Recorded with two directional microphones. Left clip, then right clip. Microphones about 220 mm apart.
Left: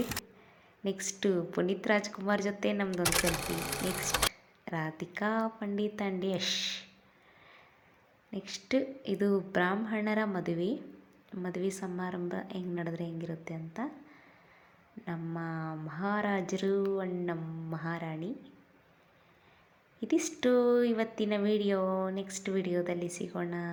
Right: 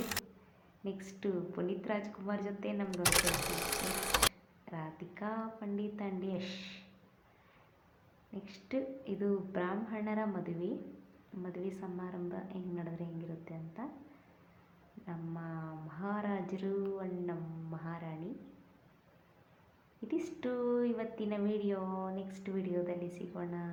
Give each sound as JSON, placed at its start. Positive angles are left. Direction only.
{"t": 0.0, "sound": "a sound", "side_deg": 0}
{"t": 0.9, "sound": "speech", "side_deg": 25}
{"t": 2.9, "sound": "speech", "side_deg": 0}
{"t": 4.6, "sound": "speech", "side_deg": 30}
{"t": 8.3, "sound": "speech", "side_deg": 25}
{"t": 15.0, "sound": "speech", "side_deg": 30}
{"t": 20.0, "sound": "speech", "side_deg": 25}